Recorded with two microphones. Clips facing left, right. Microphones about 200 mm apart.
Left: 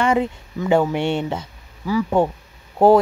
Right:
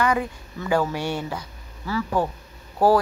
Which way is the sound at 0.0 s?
25° left (ahead or behind).